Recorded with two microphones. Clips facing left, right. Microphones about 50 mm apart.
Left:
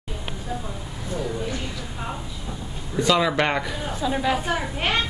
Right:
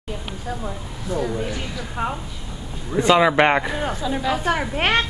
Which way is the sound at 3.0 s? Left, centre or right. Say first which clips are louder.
Right 5 dB; right.